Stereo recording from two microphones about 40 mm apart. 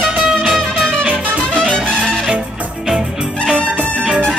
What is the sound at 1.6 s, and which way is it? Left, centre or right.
Music, centre.